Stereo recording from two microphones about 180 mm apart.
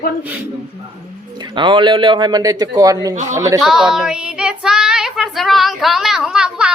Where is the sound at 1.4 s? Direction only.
25° right (ahead or behind).